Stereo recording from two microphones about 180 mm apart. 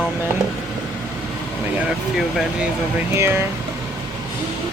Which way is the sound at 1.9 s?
5° right (ahead or behind).